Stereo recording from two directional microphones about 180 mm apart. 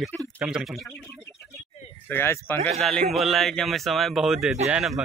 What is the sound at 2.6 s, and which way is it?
Speech, 35° right (ahead or behind).